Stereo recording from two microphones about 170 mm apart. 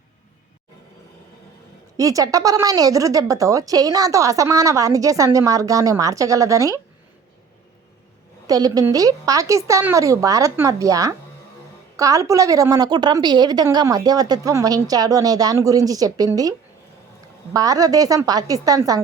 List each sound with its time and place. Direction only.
2.0 s speech: 20° right (ahead or behind)
8.4 s speech: 20° right (ahead or behind)